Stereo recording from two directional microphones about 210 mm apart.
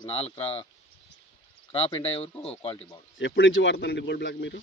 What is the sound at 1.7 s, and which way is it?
Speech, 25° left (ahead or behind).